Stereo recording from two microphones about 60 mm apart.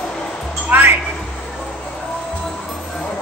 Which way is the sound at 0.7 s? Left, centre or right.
Right.